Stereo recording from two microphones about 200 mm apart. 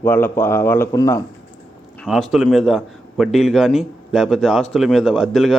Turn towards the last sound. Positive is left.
turn(degrees=0)  # may be behind; listen again after turning